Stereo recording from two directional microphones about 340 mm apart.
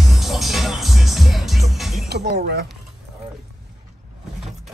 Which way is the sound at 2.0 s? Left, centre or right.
Right.